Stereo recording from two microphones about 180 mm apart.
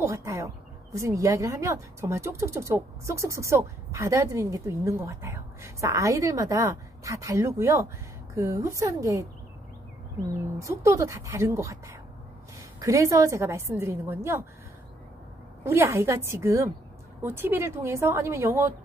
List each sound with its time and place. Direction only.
0.0 s a woman's voice: 15° right (ahead or behind)
10.6 s speech: 15° right (ahead or behind)
12.8 s speech: 15° right (ahead or behind)
15.6 s speech: 15° right (ahead or behind)